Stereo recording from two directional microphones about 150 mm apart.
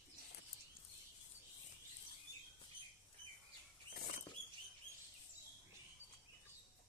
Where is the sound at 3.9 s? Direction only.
65° left (ahead or behind).